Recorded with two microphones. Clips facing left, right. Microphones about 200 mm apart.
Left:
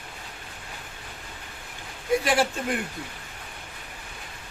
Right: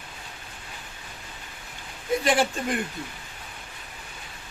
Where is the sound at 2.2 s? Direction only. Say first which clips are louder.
Right 1 dB; 5° left (ahead or behind).